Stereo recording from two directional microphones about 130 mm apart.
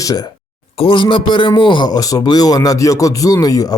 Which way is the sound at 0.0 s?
30° left (ahead or behind).